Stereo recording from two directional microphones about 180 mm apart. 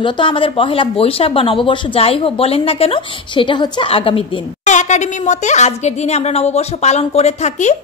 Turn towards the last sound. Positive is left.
turn(degrees=40)  # may be behind; listen again after turning